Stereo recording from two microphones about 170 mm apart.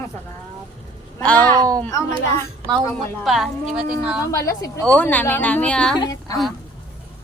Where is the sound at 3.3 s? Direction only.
Centre (ahead or behind).